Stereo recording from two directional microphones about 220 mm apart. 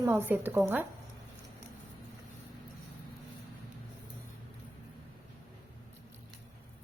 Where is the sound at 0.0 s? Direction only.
10° right (ahead or behind).